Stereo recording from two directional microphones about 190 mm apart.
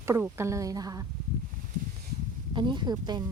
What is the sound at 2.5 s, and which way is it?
Speech, 25° right (ahead or behind).